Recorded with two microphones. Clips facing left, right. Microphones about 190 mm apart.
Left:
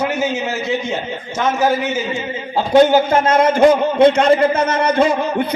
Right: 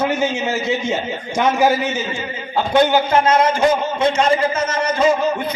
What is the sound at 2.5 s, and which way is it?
A man's voice, 40° left (ahead or behind).